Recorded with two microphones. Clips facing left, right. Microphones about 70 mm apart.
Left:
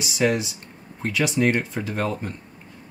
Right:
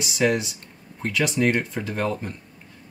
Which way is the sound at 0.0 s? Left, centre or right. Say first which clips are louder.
Even; centre.